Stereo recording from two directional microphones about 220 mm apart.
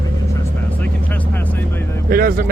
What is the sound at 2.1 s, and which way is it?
Speech, 40° right (ahead or behind).